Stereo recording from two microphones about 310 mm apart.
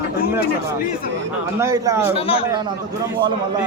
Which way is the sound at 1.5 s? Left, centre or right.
Centre.